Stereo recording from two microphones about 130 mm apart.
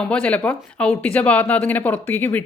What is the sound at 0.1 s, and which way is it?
Speech, 10° left (ahead or behind).